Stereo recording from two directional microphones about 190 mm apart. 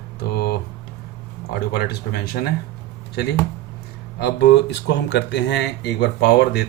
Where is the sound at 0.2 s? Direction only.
60° left (ahead or behind).